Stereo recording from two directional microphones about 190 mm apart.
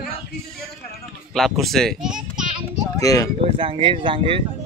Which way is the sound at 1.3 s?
Centre (ahead or behind).